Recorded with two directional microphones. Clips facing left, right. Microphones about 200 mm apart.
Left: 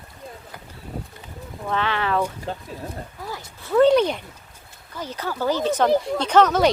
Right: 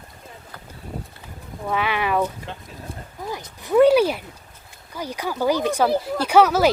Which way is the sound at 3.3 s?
20° right (ahead or behind).